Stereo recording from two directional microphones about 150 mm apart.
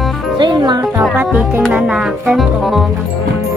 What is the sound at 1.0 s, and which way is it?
Music, 5° right (ahead or behind).